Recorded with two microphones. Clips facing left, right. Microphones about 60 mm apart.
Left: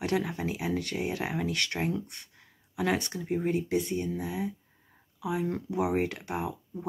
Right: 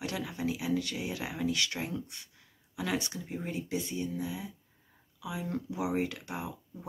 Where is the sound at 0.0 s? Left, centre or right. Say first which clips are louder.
Left 5 dB; left.